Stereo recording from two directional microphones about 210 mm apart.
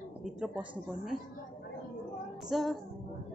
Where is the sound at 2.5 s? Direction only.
Centre (ahead or behind).